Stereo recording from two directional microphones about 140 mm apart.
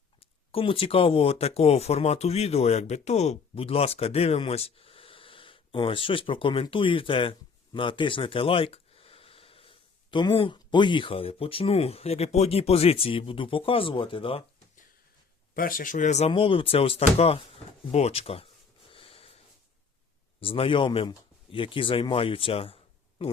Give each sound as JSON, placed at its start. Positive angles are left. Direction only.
{"t": 0.2, "sound": "speech", "side_deg": 40}
{"t": 15.5, "sound": "speech", "side_deg": 90}
{"t": 16.3, "sound": "speech", "side_deg": 40}
{"t": 18.9, "sound": "a sound", "side_deg": 40}
{"t": 20.4, "sound": "speech", "side_deg": 40}